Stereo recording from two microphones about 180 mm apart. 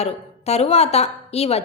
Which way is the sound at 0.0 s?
35° left (ahead or behind).